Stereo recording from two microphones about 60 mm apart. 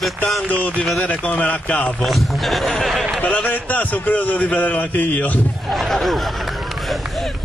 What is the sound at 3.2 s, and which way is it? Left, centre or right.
A man's voice, left.